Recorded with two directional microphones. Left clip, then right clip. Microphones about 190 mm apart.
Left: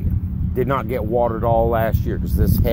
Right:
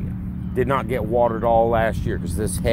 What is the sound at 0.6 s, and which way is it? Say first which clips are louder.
Speech: even; 30° left (ahead or behind).